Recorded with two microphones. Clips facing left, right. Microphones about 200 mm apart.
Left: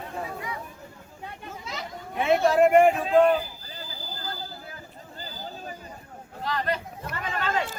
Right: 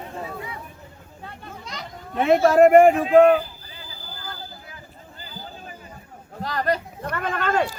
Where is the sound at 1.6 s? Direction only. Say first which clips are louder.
Left 1 dB; 5° left (ahead or behind).